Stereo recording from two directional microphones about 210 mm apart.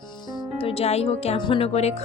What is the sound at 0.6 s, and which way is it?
Speech, 30° left (ahead or behind).